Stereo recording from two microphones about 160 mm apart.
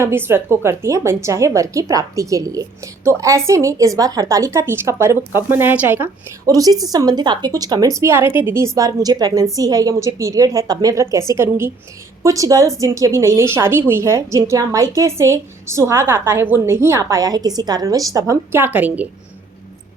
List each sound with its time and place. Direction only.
0.0 s a woman's voice: 15° right (ahead or behind)